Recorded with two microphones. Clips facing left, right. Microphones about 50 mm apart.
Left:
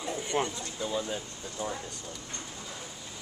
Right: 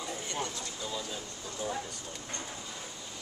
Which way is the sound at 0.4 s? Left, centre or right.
Left.